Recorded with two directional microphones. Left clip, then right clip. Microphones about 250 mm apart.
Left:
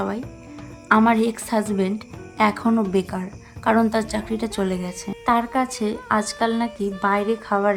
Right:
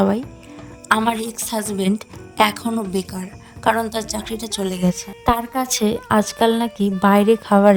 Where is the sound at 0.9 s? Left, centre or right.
Right.